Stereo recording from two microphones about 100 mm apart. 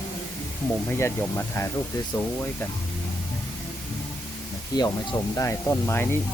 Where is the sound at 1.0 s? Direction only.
25° left (ahead or behind).